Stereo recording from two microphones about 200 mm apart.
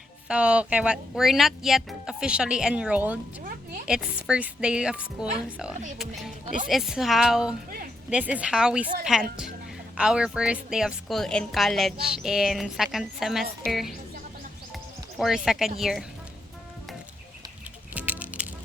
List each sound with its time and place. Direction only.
0.3 s a woman's voice: 5° right (ahead or behind)
3.4 s a sound: 45° right (ahead or behind)
3.8 s a woman's voice: 5° right (ahead or behind)
15.2 s a woman's voice: centre (ahead or behind)
17.9 s music: 5° right (ahead or behind)